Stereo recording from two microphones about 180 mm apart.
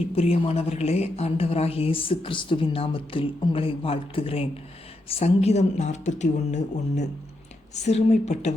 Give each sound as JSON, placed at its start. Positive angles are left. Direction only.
{"t": 0.2, "sound": "a woman's voice", "side_deg": 35}